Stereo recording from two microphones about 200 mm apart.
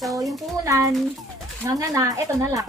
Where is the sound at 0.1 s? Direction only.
15° right (ahead or behind).